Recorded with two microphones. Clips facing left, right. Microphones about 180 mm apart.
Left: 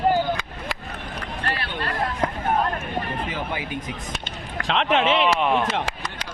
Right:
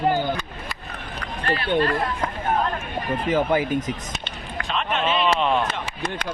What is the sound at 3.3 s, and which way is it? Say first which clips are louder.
Speech: right 9 dB; 45° right (ahead or behind).